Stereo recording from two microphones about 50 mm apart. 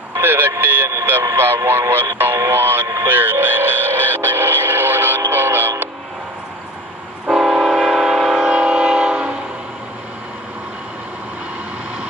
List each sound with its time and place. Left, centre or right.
0.2 s speech: right
0.5 s a sound: right
1.7 s speech: right
3.1 s radio: right
7.2 s train: centre
8.5 s train: right